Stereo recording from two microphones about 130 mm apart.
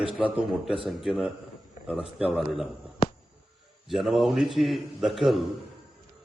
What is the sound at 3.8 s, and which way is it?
A man's voice, centre (ahead or behind).